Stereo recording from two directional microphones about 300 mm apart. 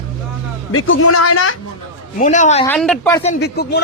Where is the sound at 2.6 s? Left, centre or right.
Centre.